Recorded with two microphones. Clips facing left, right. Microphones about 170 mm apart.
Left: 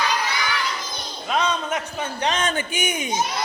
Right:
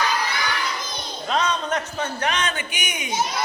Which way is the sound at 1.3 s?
10° left (ahead or behind).